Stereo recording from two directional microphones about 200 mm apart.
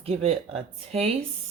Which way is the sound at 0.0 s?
30° right (ahead or behind).